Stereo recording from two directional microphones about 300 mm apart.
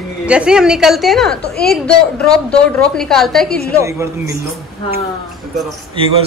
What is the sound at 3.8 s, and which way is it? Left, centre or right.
Speech, centre.